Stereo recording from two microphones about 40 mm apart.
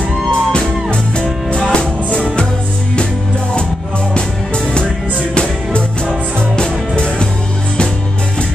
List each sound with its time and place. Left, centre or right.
0.3 s music: left
5.3 s music: left